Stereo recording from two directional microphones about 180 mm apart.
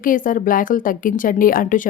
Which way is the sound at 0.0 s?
50° left (ahead or behind).